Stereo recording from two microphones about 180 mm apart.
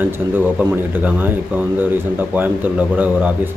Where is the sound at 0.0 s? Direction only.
10° right (ahead or behind).